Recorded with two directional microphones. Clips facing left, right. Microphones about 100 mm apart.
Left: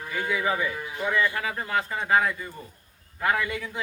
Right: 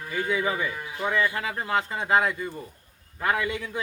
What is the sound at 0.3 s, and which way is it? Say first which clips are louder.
Speech: left 1 dB; 30° right (ahead or behind).